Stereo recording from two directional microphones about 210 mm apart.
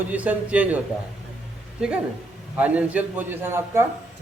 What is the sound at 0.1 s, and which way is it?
Speech, 5° right (ahead or behind).